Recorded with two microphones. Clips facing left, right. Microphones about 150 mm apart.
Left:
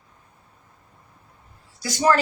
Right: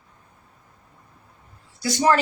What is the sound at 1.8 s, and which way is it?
Speech, 25° right (ahead or behind).